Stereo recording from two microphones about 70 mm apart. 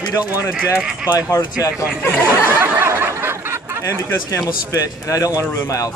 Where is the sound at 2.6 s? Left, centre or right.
Right.